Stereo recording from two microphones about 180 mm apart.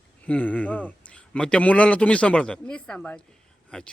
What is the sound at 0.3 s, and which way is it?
Speech, 5° left (ahead or behind).